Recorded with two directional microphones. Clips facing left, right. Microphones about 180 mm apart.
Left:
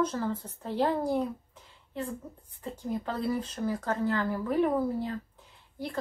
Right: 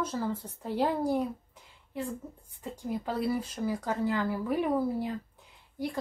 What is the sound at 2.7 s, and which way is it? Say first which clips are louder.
Speech: right 1 dB; 10° right (ahead or behind).